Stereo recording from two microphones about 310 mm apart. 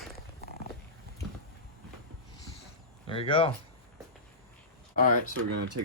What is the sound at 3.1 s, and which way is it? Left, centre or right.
Speech, centre.